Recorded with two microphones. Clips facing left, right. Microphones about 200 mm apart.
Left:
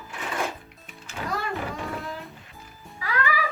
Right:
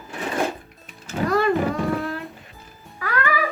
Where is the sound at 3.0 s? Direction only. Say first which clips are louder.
Right 4 dB; 60° right (ahead or behind).